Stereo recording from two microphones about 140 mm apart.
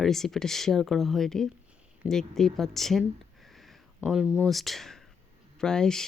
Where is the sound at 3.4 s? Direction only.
Centre (ahead or behind).